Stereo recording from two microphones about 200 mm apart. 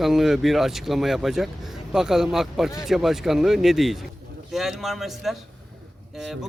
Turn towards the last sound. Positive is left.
turn(degrees=0)  # may be behind; listen again after turning